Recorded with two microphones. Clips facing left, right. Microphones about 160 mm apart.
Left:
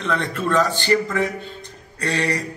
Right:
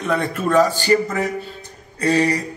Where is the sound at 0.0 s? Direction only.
10° right (ahead or behind).